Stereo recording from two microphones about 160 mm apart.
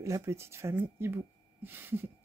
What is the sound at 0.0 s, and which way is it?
Speech, 20° right (ahead or behind).